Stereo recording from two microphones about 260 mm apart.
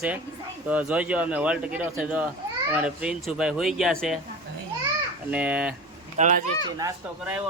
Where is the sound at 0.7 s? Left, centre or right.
Centre.